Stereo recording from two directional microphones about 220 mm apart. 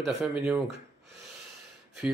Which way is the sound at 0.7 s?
50° right (ahead or behind).